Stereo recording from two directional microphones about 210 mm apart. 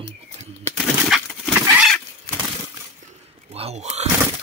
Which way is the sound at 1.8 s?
Centre (ahead or behind).